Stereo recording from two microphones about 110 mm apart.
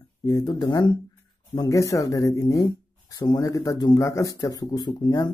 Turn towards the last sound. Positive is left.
turn(degrees=40)  # may be behind; listen again after turning